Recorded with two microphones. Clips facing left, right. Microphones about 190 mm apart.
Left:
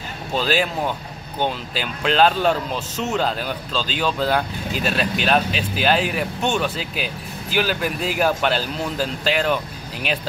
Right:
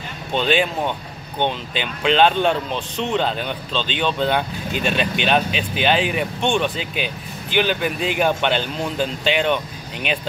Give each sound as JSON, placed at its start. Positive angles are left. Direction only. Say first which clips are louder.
{"t": 0.3, "sound": "speech", "louder": "right 2 dB", "side_deg": 5}